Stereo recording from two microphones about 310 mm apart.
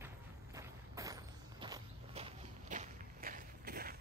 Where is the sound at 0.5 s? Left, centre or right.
Centre; by 4.0 s right.